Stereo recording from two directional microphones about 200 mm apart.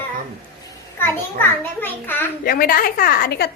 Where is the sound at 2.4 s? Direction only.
45° left (ahead or behind).